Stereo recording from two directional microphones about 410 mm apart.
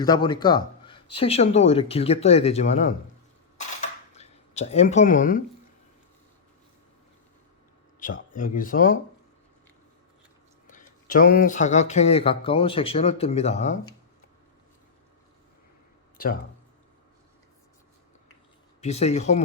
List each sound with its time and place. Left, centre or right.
0.0 s speech: centre
3.8 s a sound: centre
7.9 s speech: centre
10.7 s speech: centre
16.1 s speech: left
18.8 s speech: centre